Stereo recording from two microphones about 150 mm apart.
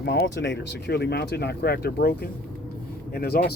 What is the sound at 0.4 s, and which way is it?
Speech, 90° left.